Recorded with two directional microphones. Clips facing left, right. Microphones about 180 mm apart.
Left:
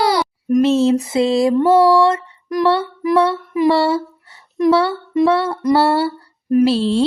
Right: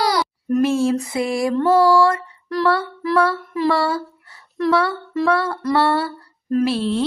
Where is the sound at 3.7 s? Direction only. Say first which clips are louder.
Left 4 dB; 25° left (ahead or behind).